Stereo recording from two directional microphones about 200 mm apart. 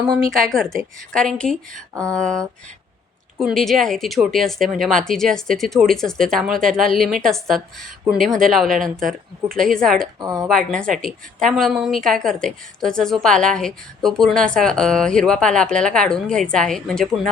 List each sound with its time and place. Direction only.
0.3 s a woman's voice: centre (ahead or behind)
10.2 s speech: 15° right (ahead or behind)
10.5 s a woman's voice: 5° left (ahead or behind)